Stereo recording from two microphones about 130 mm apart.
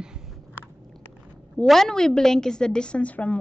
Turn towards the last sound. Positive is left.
turn(degrees=10)  # may be behind; listen again after turning